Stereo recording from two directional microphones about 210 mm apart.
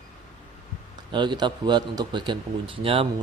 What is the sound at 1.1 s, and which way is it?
Speech, 20° right (ahead or behind).